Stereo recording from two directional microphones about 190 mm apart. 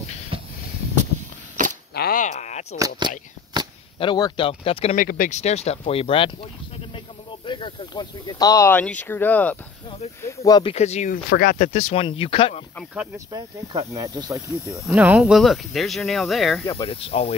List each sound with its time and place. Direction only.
0.3 s a sound: 30° right (ahead or behind)
2.0 s a sound: 50° left (ahead or behind)
3.0 s speech: 25° right (ahead or behind)
4.0 s speech: 25° left (ahead or behind)
4.9 s speech: 45° left (ahead or behind); by 10.7 s 20° left (ahead or behind)
10.7 s speech: 35° left (ahead or behind)
11.2 s speech: 55° left (ahead or behind)
11.5 s speech: 40° left (ahead or behind)
13.3 s speech: 15° right (ahead or behind)
14.9 s speech: 5° right (ahead or behind)
16.7 s speech: 30° left (ahead or behind)